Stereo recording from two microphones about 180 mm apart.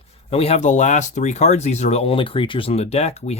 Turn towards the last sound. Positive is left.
turn(degrees=35)  # may be behind; listen again after turning